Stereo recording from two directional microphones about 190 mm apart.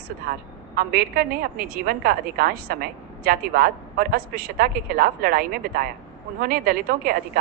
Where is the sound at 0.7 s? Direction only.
50° right (ahead or behind).